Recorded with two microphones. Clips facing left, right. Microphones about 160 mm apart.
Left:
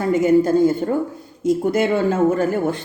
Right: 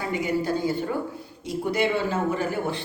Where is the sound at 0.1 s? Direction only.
45° left (ahead or behind).